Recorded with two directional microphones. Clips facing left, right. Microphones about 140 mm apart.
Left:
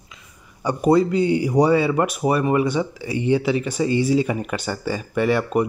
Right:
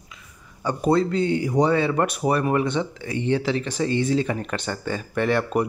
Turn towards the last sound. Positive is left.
turn(degrees=0)  # may be behind; listen again after turning